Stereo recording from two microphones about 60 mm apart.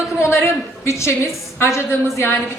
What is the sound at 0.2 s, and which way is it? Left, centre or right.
A woman's voice, left.